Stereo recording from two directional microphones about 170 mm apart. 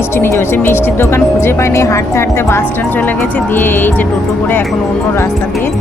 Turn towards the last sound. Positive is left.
turn(degrees=10)  # may be behind; listen again after turning